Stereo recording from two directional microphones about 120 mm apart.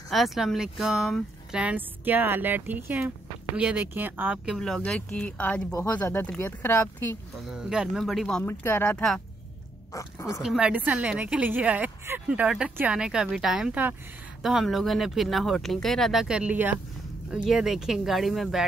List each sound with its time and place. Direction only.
0.1 s speech: centre (ahead or behind)
4.5 s speech: centre (ahead or behind); by 7.2 s 20° left (ahead or behind)
7.4 s speech: 5° right (ahead or behind)
8.5 s speech: 20° left (ahead or behind)
10.4 s speech: 5° right (ahead or behind)